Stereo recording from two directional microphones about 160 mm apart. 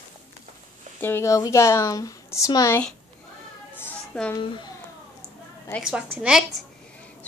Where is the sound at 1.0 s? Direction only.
15° left (ahead or behind).